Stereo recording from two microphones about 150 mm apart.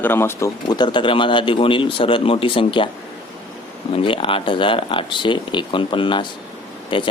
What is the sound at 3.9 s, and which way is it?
Speech, 35° left (ahead or behind).